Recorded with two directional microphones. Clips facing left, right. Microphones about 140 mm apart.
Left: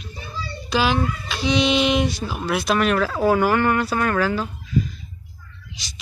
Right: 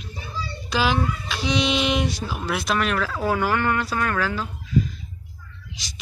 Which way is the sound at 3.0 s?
30° left (ahead or behind).